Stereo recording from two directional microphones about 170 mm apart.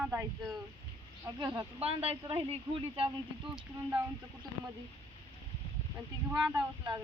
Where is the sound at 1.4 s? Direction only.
25° right (ahead or behind).